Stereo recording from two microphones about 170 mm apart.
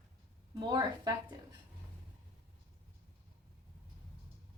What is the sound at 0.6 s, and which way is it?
Speech, 25° right (ahead or behind).